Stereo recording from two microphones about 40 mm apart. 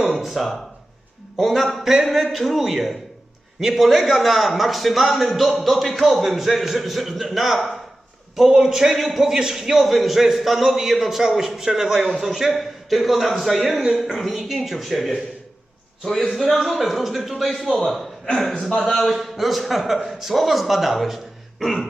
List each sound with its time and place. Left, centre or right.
0.2 s a man's voice: centre
18.5 s a man's voice: centre
18.9 s a man's voice: centre